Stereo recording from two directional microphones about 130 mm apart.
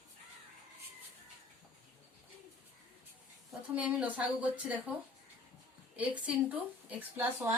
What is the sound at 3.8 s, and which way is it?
Speech, 10° right (ahead or behind).